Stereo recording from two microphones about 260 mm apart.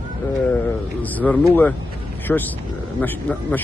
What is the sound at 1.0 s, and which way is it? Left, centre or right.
Speech, centre.